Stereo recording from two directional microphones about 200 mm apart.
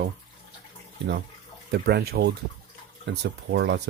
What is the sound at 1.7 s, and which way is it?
Speech, 55° right (ahead or behind).